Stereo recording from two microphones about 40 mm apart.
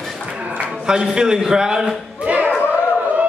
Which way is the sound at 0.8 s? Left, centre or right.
Centre.